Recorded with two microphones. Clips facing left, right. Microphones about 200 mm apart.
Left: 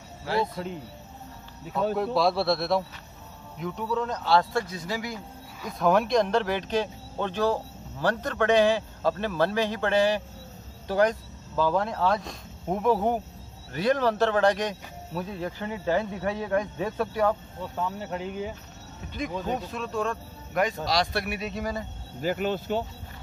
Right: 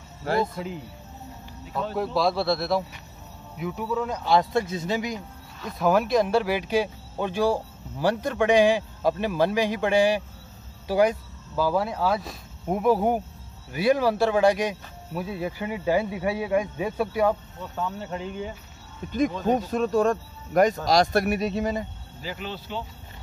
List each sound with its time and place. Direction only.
0.2 s speech: 50° right (ahead or behind)
2.1 s speech: centre (ahead or behind); by 5.2 s 20° right (ahead or behind)
5.6 s speech: centre (ahead or behind)
17.7 s speech: 5° left (ahead or behind)
19.4 s speech: 45° right (ahead or behind)
21.5 s speech: 25° right (ahead or behind)
22.2 s speech: 50° left (ahead or behind)